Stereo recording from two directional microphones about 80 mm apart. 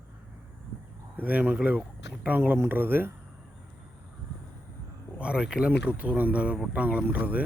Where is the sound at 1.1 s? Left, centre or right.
Right.